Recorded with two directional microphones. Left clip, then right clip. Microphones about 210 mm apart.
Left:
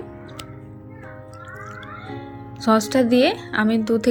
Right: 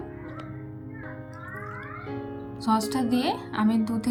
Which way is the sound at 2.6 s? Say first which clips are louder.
Left 8 dB; 10° left (ahead or behind).